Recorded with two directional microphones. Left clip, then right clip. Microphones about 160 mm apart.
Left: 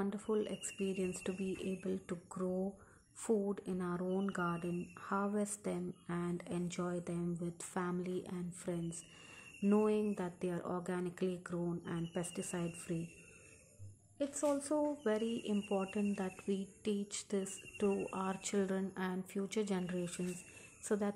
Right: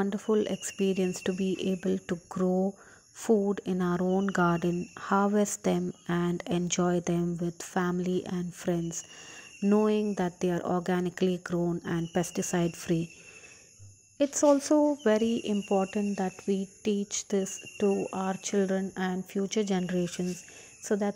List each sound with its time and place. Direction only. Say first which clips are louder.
0.0 s speech: right 10 dB; 45° right (ahead or behind)
14.1 s speech: right 13 dB; 50° right (ahead or behind)